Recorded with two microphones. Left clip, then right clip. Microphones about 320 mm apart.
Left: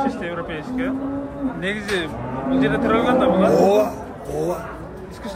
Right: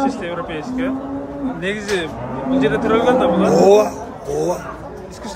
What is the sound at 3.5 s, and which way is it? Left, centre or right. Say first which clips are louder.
Speech: right 4 dB; right.